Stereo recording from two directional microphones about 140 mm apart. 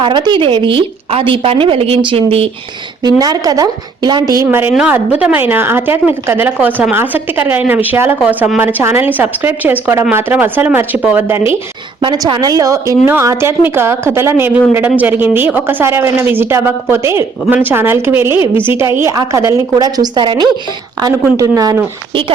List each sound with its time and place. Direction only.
0.0 s a woman's voice: 35° right (ahead or behind)
3.0 s a woman's voice: 30° right (ahead or behind)
4.4 s a woman's voice: 15° right (ahead or behind)
11.9 s a woman's voice: 30° right (ahead or behind)